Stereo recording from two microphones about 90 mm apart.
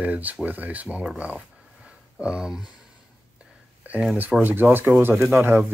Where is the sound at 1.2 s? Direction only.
15° right (ahead or behind).